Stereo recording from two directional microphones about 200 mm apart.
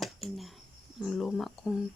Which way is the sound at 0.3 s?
Centre (ahead or behind).